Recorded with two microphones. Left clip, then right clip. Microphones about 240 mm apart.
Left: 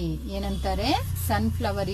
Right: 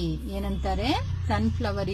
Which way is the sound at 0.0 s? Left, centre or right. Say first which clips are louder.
Even; centre.